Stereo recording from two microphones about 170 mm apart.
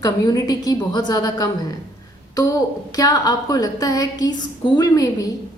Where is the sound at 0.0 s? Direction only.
20° left (ahead or behind).